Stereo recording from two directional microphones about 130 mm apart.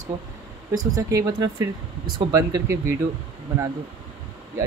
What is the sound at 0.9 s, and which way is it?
Speech, 25° right (ahead or behind).